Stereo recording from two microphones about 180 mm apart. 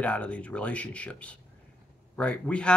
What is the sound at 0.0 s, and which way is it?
Speech, 5° left (ahead or behind).